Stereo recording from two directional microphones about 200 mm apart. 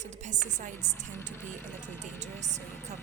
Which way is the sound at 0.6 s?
40° right (ahead or behind).